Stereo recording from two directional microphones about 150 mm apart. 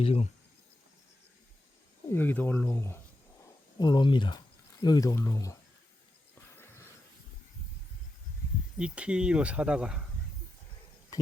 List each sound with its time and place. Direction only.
0.0 s speech: 40° left (ahead or behind)
2.1 s speech: 15° left (ahead or behind)
3.8 s speech: 30° left (ahead or behind)
8.8 s speech: 5° right (ahead or behind)